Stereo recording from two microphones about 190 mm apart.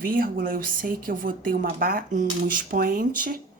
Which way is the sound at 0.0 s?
50° right (ahead or behind).